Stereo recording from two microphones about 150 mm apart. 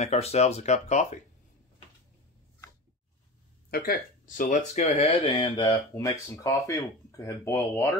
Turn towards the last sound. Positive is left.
turn(degrees=20)  # may be behind; listen again after turning